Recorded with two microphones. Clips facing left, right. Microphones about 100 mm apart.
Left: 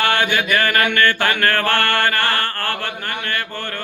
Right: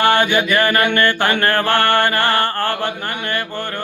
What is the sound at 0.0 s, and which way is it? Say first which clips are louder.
Mantra: right 4 dB; 15° right (ahead or behind).